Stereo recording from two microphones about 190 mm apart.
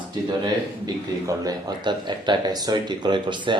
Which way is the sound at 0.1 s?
25° right (ahead or behind).